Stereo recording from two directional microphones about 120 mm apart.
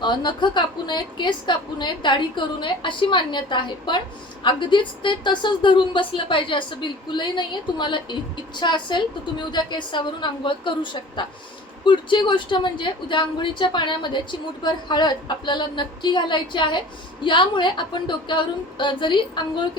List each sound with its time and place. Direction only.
0.0 s a woman's voice: 40° left (ahead or behind)